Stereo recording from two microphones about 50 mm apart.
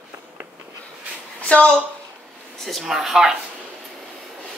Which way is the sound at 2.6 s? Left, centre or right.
Centre.